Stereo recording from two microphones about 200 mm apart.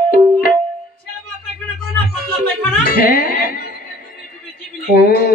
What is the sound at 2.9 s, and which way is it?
Speech, 50° left (ahead or behind).